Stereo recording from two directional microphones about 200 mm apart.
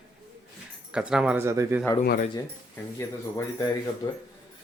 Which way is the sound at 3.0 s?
15° left (ahead or behind).